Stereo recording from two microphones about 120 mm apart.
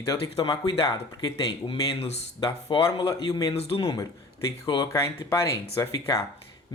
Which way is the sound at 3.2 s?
30° left (ahead or behind).